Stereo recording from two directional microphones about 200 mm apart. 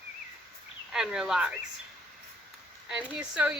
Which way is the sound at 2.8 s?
5° right (ahead or behind).